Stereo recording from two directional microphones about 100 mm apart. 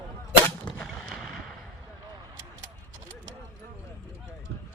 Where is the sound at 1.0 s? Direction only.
5° right (ahead or behind).